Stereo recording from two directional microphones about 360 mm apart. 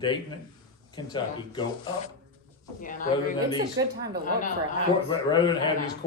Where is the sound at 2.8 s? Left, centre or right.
Left.